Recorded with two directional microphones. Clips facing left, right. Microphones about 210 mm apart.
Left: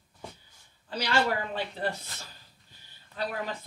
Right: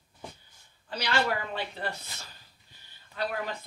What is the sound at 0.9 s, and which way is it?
Speech, 45° left (ahead or behind).